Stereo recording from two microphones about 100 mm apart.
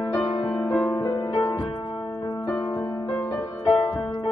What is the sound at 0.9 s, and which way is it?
Music, 40° left (ahead or behind).